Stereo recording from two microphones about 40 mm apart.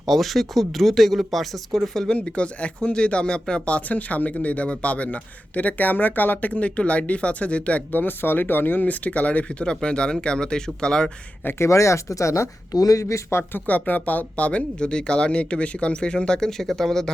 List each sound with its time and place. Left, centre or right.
0.0 s speech: centre
2.0 s speech: left
3.7 s speech: left
7.9 s speech: left
8.9 s speech: left
11.4 s speech: left
13.3 s speech: left
13.7 s speech: left
16.5 s speech: centre